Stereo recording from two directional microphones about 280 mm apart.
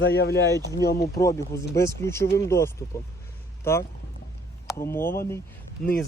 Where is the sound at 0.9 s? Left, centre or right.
Centre.